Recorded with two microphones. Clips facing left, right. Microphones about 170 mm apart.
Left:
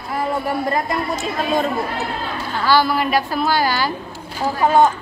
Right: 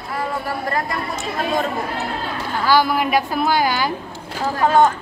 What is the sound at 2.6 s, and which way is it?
A woman's voice, 15° right (ahead or behind).